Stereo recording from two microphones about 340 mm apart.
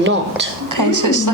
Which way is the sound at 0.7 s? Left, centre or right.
Right.